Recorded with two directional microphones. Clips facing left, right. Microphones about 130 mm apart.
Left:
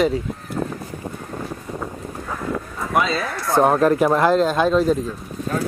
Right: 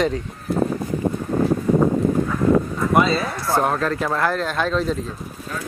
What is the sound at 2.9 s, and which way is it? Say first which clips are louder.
Speech: right 2 dB; centre (ahead or behind).